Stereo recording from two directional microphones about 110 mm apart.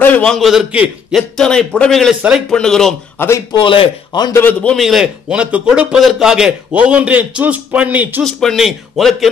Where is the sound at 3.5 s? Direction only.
50° left (ahead or behind).